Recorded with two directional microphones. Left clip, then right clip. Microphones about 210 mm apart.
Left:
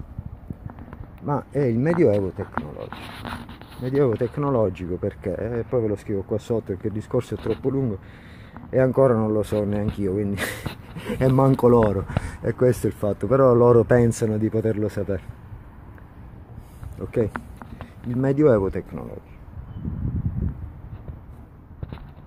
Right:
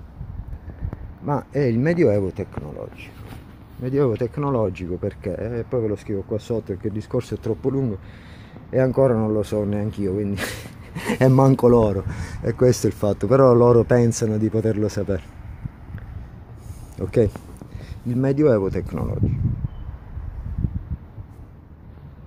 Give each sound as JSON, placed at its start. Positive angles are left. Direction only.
{"t": 1.2, "sound": "speech", "side_deg": 0}
{"t": 11.0, "sound": "speech", "side_deg": -15}
{"t": 17.0, "sound": "speech", "side_deg": -20}
{"t": 18.2, "sound": "speech", "side_deg": 5}
{"t": 18.9, "sound": "speech", "side_deg": -25}